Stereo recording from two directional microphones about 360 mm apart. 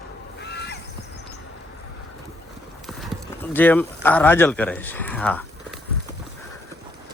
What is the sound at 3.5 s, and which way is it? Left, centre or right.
Speech, centre.